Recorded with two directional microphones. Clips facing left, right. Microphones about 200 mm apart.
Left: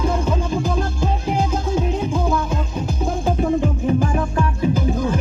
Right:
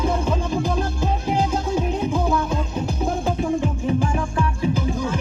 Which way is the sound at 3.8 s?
45° left (ahead or behind).